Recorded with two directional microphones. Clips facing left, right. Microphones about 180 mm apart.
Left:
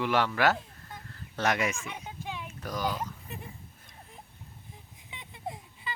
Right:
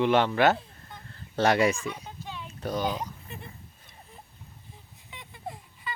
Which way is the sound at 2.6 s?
25° right (ahead or behind).